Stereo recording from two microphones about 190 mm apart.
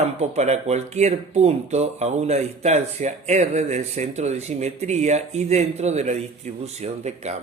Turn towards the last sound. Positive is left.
turn(degrees=-35)  # may be behind; listen again after turning